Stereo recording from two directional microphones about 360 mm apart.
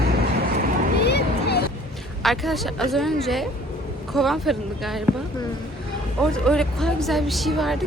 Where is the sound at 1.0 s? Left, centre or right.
Left.